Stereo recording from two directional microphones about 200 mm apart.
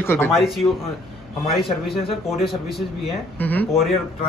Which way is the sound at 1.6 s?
Centre (ahead or behind).